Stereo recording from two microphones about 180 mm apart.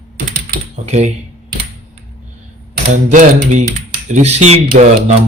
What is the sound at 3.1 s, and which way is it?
Speech, 45° right (ahead or behind).